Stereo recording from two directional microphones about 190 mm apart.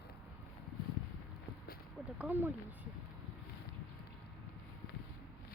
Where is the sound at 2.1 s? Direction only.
10° right (ahead or behind).